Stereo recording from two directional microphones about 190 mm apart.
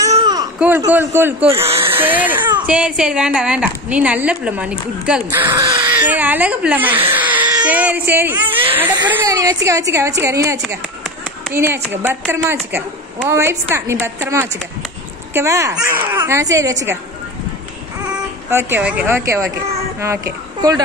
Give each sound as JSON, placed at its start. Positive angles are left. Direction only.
{"t": 0.1, "sound": "baby cry", "side_deg": -20}
{"t": 0.6, "sound": "a woman's voice", "side_deg": -10}
{"t": 5.5, "sound": "a woman's voice", "side_deg": -15}
{"t": 18.1, "sound": "a woman's voice", "side_deg": -10}